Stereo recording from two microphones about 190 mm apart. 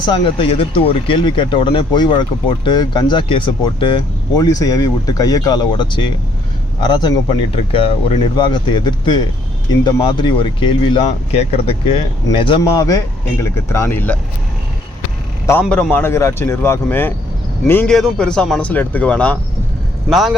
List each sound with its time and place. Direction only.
0.0 s speech: 25° left (ahead or behind); by 14.2 s 10° left (ahead or behind)
15.6 s speech: centre (ahead or behind)